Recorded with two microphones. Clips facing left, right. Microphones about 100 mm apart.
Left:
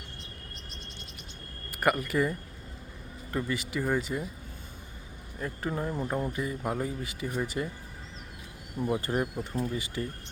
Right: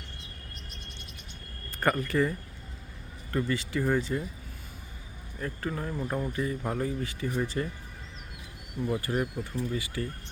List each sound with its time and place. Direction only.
1.8 s speech: 15° left (ahead or behind)
3.5 s speech: 15° left (ahead or behind)
5.6 s speech: 20° left (ahead or behind)
9.0 s speech: 25° left (ahead or behind)